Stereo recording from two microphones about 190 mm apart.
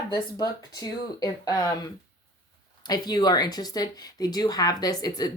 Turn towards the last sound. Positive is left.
turn(degrees=20)  # may be behind; listen again after turning